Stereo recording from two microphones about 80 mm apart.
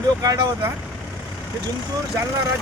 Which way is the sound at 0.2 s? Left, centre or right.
Right.